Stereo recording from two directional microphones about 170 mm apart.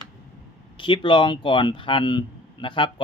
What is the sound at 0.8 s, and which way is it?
Speech, 30° left (ahead or behind).